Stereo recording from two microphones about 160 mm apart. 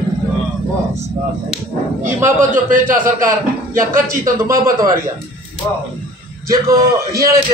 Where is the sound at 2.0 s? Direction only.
55° right (ahead or behind).